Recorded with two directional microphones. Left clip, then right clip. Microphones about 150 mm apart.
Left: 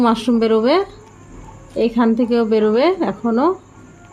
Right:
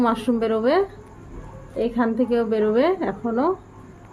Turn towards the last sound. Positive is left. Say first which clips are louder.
# left 5 dB
turn(degrees=65)  # may be behind; listen again after turning